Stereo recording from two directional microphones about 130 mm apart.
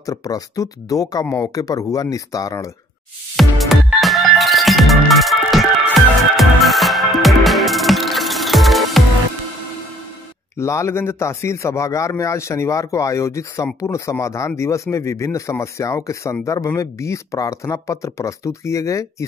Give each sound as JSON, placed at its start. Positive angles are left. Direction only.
{"t": 0.0, "sound": "a man's voice", "side_deg": 25}
{"t": 3.3, "sound": "music", "side_deg": 0}
{"t": 10.6, "sound": "a man's voice", "side_deg": 20}